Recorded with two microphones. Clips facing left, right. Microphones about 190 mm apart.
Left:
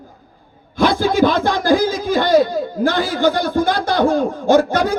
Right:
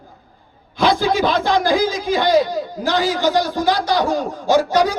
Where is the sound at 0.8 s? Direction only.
50° left (ahead or behind).